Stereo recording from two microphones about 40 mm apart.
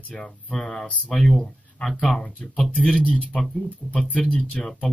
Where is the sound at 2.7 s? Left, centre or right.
Left.